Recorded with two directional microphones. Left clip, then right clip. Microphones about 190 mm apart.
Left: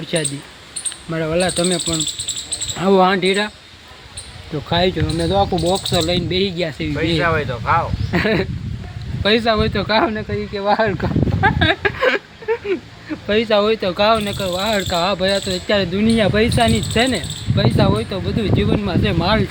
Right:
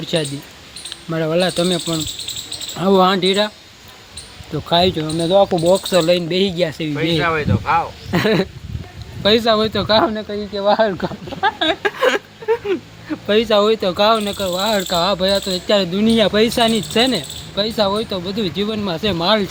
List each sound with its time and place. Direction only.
0.0 s speech: 15° right (ahead or behind)
4.5 s speech: 15° right (ahead or behind)
5.7 s speech: 30° right (ahead or behind)
7.2 s speech: 5° left (ahead or behind)
8.1 s speech: 20° right (ahead or behind)